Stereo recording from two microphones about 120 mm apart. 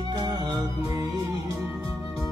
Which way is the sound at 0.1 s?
35° right (ahead or behind).